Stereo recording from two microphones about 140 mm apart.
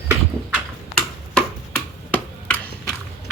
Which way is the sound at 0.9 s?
5° left (ahead or behind).